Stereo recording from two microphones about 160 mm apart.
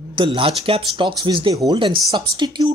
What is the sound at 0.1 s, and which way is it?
Speech, 30° right (ahead or behind).